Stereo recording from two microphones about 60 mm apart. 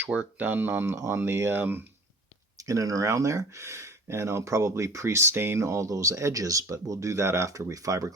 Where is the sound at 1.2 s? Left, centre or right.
Right.